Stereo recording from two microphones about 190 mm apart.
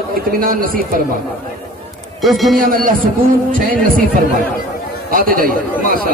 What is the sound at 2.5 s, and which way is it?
Speech, 45° right (ahead or behind).